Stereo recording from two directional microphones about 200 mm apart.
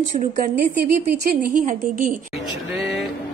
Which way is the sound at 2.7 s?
5° right (ahead or behind).